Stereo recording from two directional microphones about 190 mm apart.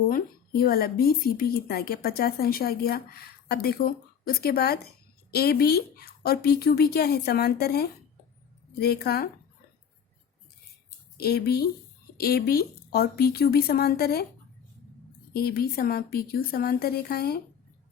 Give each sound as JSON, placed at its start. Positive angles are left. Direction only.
{"t": 0.1, "sound": "speech", "side_deg": 50}
{"t": 11.2, "sound": "speech", "side_deg": 55}
{"t": 15.3, "sound": "speech", "side_deg": 55}